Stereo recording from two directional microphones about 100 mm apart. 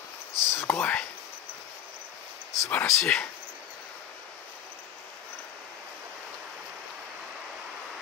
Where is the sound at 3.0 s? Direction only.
10° left (ahead or behind).